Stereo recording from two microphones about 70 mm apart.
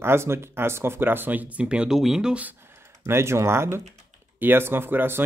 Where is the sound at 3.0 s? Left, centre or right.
Right.